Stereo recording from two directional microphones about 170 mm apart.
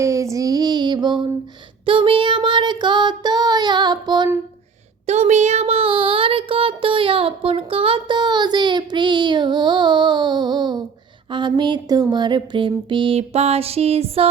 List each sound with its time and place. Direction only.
0.0 s female singing: 20° right (ahead or behind)
1.8 s child singing: 30° right (ahead or behind)
5.0 s child singing: 40° right (ahead or behind); by 10.8 s 25° right (ahead or behind)
11.3 s a sound: 25° right (ahead or behind)